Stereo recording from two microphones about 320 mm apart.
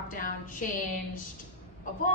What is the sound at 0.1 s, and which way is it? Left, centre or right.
Music, left.